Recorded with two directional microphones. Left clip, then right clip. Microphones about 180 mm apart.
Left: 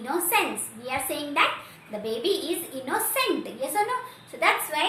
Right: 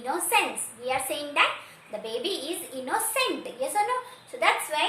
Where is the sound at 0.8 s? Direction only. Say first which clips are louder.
Right 1 dB; 15° right (ahead or behind).